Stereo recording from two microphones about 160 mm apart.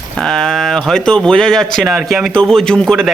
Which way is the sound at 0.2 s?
5° left (ahead or behind).